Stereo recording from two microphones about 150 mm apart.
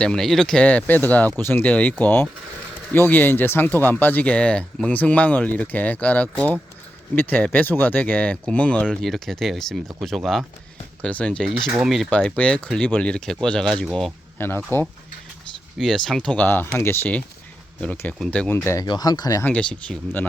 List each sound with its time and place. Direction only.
0.0 s speech: 5° left (ahead or behind)
12.1 s speech: 10° left (ahead or behind)
14.3 s speech: 15° left (ahead or behind)
15.8 s speech: centre (ahead or behind); by 19.5 s 25° left (ahead or behind)
19.5 s speech: 5° left (ahead or behind)